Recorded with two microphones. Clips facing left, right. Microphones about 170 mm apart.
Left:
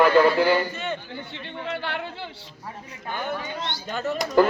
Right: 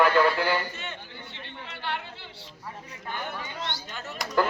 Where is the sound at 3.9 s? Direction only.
90° left.